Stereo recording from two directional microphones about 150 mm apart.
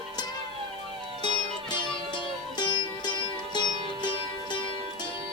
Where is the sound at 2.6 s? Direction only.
30° left (ahead or behind).